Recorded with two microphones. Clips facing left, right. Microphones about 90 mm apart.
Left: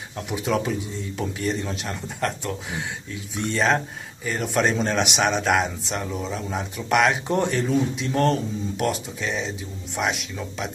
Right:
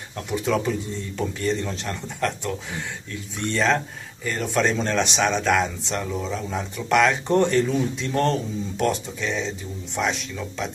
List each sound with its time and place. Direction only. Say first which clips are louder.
0.3 s a man's voice: right 1 dB; 5° left (ahead or behind)